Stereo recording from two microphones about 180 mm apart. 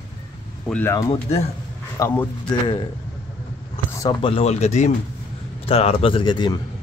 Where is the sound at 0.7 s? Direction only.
10° left (ahead or behind).